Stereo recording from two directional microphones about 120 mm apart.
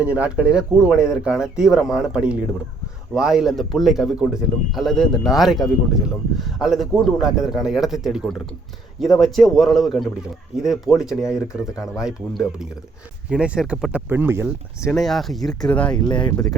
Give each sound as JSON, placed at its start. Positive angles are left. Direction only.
{"t": 0.0, "sound": "a man's voice", "side_deg": -10}
{"t": 14.8, "sound": "a man's voice", "side_deg": 0}
{"t": 16.0, "sound": "speech", "side_deg": 40}